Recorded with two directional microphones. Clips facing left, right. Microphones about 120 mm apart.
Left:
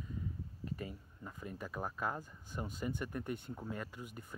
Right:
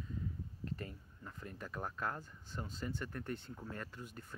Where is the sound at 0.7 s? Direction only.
10° left (ahead or behind).